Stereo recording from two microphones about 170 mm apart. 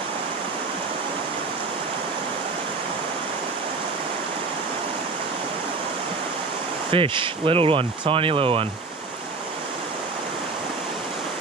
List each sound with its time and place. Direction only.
6.9 s speech: 30° right (ahead or behind)